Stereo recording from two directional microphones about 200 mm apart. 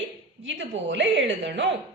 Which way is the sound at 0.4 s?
65° right (ahead or behind).